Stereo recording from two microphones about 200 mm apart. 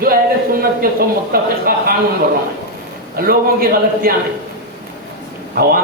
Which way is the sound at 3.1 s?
45° right (ahead or behind).